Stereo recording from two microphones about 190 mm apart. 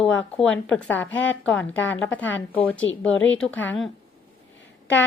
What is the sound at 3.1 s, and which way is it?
Speech, 85° left.